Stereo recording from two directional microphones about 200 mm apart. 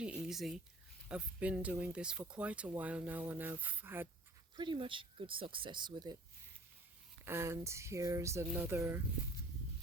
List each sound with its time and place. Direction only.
0.0 s a sound: 5° right (ahead or behind)
1.0 s speech: 5° right (ahead or behind)
4.5 s speech: 25° right (ahead or behind)
7.3 s speech: 15° right (ahead or behind)